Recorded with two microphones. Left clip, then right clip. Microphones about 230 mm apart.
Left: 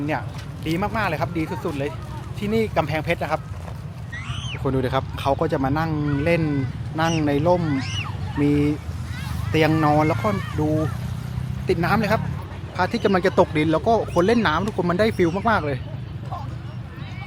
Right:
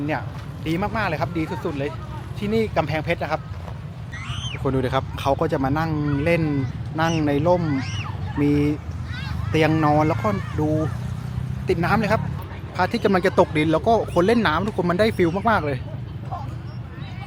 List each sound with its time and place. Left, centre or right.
0.0 s speech: centre
10.2 s speech: centre
11.6 s a man's voice: centre